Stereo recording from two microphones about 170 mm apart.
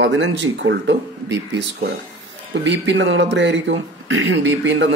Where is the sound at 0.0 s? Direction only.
90° right.